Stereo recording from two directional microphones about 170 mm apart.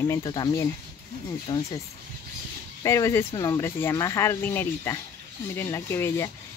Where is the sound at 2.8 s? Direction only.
20° left (ahead or behind).